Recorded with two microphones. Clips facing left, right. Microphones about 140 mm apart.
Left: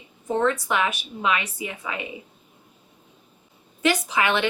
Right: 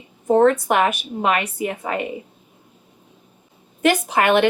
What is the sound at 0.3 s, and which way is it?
Speech, 50° right (ahead or behind).